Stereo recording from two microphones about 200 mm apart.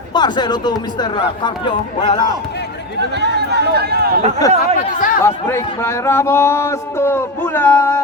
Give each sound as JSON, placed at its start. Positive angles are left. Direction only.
{"t": 0.1, "sound": "speech", "side_deg": 20}
{"t": 3.2, "sound": "speech", "side_deg": -55}
{"t": 4.4, "sound": "speech", "side_deg": 20}
{"t": 4.9, "sound": "speech", "side_deg": 40}
{"t": 5.2, "sound": "speech", "side_deg": 15}